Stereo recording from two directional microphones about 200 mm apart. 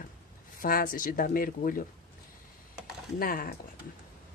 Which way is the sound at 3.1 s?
45° left (ahead or behind).